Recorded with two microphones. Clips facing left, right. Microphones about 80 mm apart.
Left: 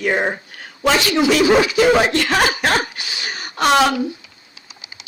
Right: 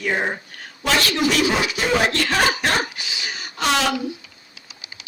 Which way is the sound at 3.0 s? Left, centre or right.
Left.